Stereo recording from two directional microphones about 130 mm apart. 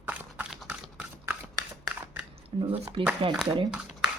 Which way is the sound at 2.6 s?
45° right (ahead or behind).